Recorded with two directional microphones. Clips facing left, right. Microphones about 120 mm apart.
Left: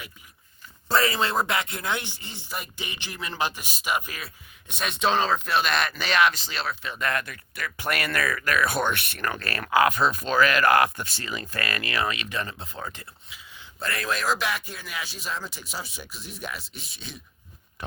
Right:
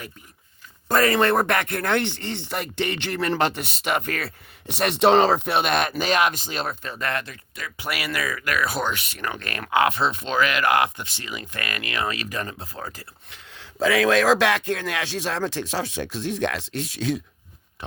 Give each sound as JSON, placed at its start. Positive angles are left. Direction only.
{"t": 0.9, "sound": "speech", "side_deg": -50}
{"t": 6.9, "sound": "speech", "side_deg": -30}
{"t": 7.8, "sound": "speech", "side_deg": -10}
{"t": 12.3, "sound": "speech", "side_deg": -35}
{"t": 13.3, "sound": "speech", "side_deg": -75}